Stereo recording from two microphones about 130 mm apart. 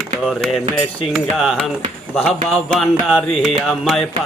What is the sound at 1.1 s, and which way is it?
Music, centre (ahead or behind).